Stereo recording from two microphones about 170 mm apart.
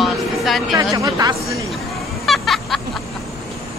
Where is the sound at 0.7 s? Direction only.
20° right (ahead or behind).